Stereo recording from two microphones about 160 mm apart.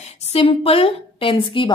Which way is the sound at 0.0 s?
45° left (ahead or behind).